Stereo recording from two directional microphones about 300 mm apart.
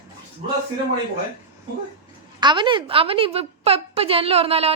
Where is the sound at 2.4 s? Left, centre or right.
Centre.